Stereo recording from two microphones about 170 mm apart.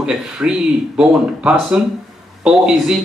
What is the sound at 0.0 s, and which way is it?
Speech, 5° right (ahead or behind).